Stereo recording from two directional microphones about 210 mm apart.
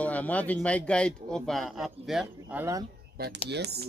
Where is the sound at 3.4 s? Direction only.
55° right (ahead or behind).